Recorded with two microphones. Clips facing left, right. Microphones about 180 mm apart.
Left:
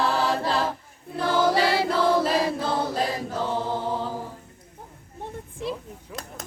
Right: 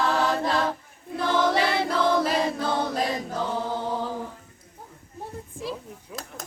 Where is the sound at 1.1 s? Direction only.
5° left (ahead or behind).